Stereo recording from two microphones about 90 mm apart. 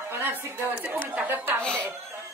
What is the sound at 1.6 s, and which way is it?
Speech, 10° left (ahead or behind).